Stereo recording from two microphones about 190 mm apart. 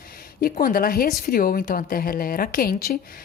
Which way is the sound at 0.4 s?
50° left (ahead or behind).